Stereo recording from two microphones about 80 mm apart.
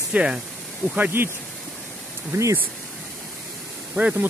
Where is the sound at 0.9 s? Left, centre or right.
Right.